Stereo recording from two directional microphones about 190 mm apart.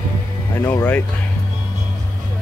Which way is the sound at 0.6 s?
10° left (ahead or behind).